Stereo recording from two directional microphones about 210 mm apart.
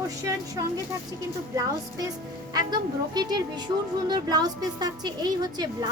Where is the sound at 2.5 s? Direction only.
20° right (ahead or behind).